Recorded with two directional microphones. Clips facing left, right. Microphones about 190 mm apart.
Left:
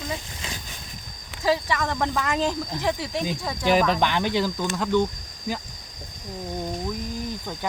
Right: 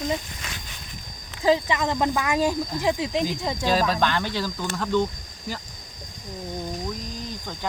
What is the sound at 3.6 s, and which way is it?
Speech, 15° left (ahead or behind).